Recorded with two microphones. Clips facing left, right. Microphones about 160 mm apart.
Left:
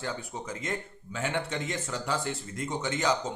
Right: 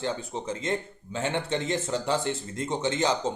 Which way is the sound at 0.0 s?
25° right (ahead or behind).